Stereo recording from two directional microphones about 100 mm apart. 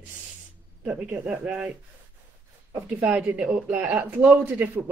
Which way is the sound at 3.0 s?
15° right (ahead or behind).